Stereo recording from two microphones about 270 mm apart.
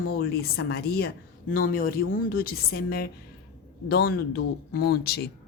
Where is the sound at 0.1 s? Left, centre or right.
Left.